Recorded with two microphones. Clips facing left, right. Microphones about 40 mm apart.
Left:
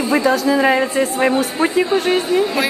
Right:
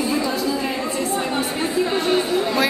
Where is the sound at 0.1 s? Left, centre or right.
Left.